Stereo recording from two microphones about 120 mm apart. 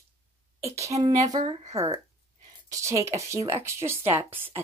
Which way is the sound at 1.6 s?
60° right (ahead or behind).